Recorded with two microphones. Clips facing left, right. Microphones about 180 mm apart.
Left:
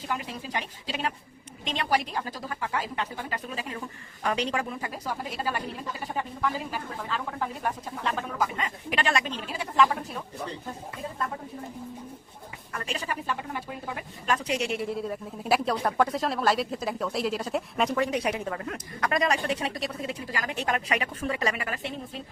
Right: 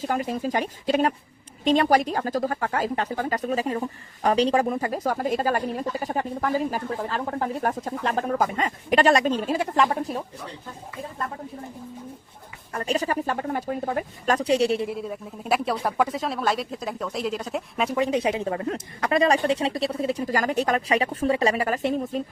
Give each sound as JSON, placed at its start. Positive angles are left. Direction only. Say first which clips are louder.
{"t": 0.1, "sound": "speech", "louder": "right 7 dB", "side_deg": -45}
{"t": 4.6, "sound": "speech", "louder": "right 9 dB", "side_deg": -45}
{"t": 12.7, "sound": "a woman's voice", "louder": "right 8 dB", "side_deg": -40}
{"t": 14.9, "sound": "speech", "louder": "even", "side_deg": 0}
{"t": 17.9, "sound": "a woman's voice", "louder": "right 8 dB", "side_deg": -25}